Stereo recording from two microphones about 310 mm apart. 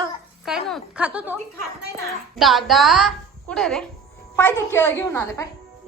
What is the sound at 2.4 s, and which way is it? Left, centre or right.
A child's voice, centre.